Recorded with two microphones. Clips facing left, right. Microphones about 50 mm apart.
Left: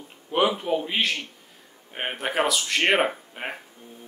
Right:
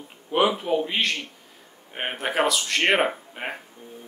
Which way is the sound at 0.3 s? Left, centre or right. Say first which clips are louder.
Right 1 dB; centre.